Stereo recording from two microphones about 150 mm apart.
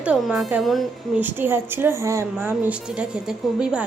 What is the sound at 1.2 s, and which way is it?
A woman's voice, 15° right (ahead or behind).